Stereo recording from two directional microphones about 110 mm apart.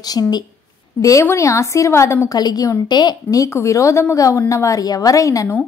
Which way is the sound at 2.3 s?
35° left (ahead or behind).